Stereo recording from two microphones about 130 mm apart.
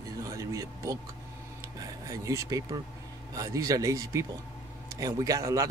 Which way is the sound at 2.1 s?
25° right (ahead or behind).